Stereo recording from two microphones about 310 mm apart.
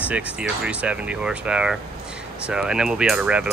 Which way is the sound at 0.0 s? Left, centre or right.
Centre.